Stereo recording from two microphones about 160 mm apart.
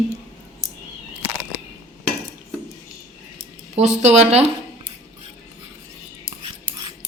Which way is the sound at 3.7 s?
45° right (ahead or behind).